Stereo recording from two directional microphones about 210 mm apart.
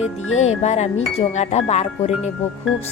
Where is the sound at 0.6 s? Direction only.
30° left (ahead or behind).